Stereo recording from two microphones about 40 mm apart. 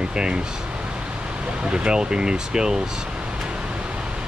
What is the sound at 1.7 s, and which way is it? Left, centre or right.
Speech, right.